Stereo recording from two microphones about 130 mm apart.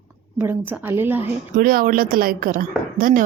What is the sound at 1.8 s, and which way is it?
A woman's voice, 90° right.